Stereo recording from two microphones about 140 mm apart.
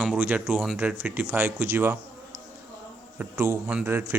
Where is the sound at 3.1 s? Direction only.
15° right (ahead or behind).